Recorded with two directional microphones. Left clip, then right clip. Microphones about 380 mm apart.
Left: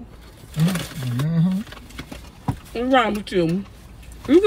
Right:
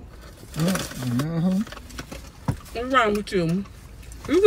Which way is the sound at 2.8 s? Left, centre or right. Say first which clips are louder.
Left 2 dB; centre.